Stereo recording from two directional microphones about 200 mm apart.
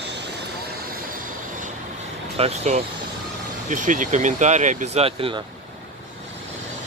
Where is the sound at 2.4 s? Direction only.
30° right (ahead or behind).